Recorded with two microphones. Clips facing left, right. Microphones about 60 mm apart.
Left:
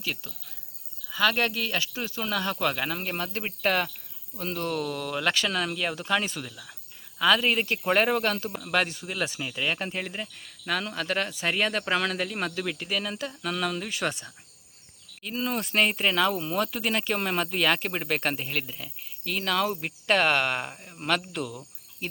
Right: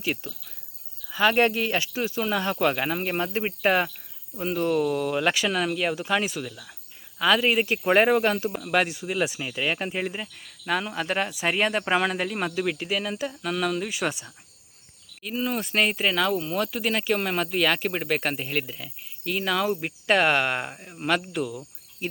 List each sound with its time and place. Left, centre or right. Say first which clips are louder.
0.0 s speech: right 5 dB; right; by 22.1 s centre